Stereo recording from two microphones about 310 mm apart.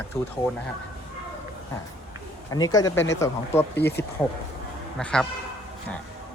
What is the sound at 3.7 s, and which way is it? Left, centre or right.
Speech, left.